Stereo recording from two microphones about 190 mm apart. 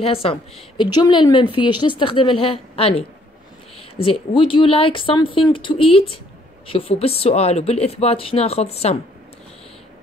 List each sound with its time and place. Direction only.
0.0 s a woman's voice: 30° left (ahead or behind)